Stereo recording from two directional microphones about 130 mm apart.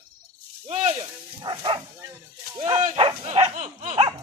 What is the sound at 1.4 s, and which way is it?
Speech, 35° right (ahead or behind).